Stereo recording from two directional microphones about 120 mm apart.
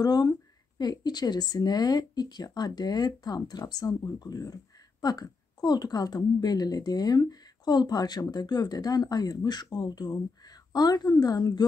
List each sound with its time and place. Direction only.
0.0 s speech: 35° left (ahead or behind)